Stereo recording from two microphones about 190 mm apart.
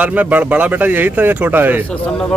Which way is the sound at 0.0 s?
10° right (ahead or behind).